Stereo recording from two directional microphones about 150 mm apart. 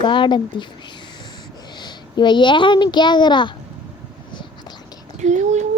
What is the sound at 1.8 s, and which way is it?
Speech, 30° left (ahead or behind).